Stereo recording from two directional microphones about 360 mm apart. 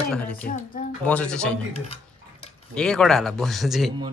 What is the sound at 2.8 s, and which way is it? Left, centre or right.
Speech, centre.